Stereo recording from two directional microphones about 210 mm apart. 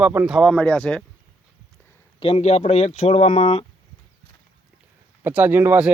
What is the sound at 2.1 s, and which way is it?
Speech, 25° left (ahead or behind).